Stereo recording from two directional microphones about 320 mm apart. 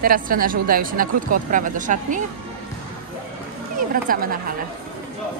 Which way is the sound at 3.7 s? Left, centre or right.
Right.